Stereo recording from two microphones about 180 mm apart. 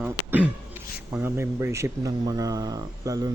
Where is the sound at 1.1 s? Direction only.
15° right (ahead or behind).